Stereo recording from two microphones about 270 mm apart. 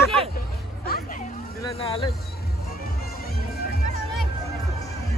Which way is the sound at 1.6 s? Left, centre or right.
Centre.